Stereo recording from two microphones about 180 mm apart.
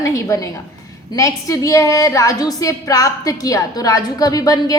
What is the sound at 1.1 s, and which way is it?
A woman's voice, 20° left (ahead or behind).